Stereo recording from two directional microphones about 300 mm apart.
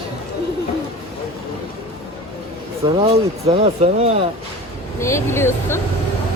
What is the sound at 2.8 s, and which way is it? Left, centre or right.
Speech, centre.